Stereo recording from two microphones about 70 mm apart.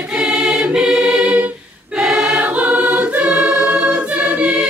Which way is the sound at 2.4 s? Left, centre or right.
Right.